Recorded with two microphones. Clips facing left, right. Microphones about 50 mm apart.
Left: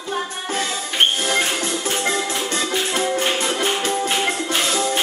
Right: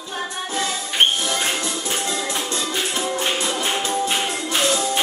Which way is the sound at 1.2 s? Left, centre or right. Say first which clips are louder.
Left 2 dB; left.